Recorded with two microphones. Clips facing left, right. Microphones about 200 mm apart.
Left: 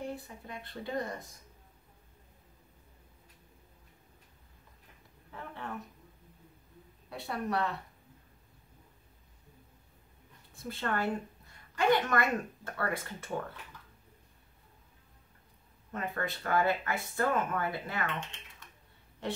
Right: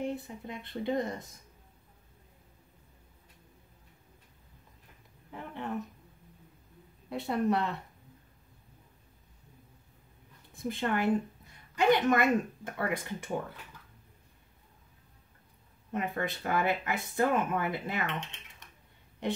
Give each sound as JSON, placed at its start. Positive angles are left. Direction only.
{"t": 0.0, "sound": "speech", "side_deg": -20}
{"t": 5.3, "sound": "speech", "side_deg": -15}
{"t": 7.1, "sound": "speech", "side_deg": -20}
{"t": 10.5, "sound": "a woman's voice", "side_deg": -20}
{"t": 15.9, "sound": "speech", "side_deg": -20}
{"t": 19.2, "sound": "a woman's voice", "side_deg": -15}